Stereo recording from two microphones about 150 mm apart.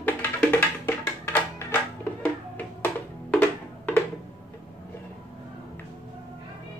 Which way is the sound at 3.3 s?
10° left (ahead or behind).